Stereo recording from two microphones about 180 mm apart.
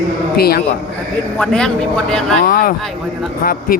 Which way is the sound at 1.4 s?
5° left (ahead or behind).